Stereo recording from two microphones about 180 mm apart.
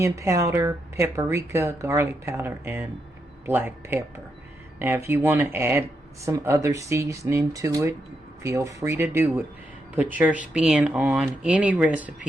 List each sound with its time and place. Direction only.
0.0 s speech: 15° right (ahead or behind)